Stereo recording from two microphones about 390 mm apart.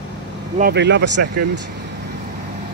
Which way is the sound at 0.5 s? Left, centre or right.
Right.